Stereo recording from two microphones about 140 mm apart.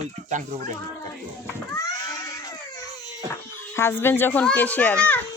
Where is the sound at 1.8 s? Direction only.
25° left (ahead or behind).